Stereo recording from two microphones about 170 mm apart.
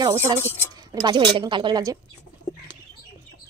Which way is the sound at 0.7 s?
25° right (ahead or behind).